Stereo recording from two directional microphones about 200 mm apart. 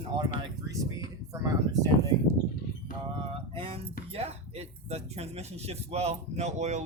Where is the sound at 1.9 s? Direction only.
90° left.